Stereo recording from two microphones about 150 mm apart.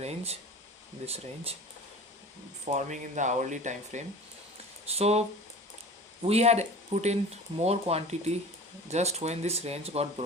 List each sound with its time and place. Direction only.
0.0 s speech: 45° right (ahead or behind)
2.7 s speech: 55° right (ahead or behind)
4.9 s speech: 45° right (ahead or behind)
6.2 s speech: 45° right (ahead or behind)